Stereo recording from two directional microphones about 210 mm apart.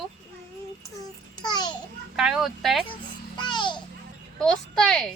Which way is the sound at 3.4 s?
20° left (ahead or behind).